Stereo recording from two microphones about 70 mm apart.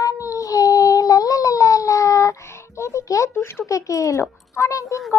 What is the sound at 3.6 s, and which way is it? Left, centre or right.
A child's voice, left.